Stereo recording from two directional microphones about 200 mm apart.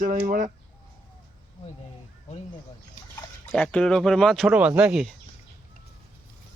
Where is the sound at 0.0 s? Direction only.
40° right (ahead or behind).